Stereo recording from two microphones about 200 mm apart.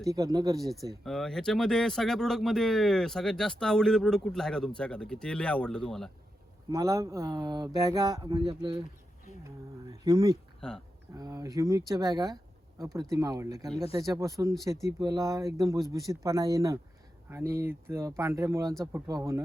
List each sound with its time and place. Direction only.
0.1 s speech: 20° right (ahead or behind)
1.0 s speech: centre (ahead or behind)
6.7 s speech: 15° right (ahead or behind)
10.0 s speech: 20° right (ahead or behind)
10.6 s speech: 5° left (ahead or behind)
11.1 s speech: 15° right (ahead or behind)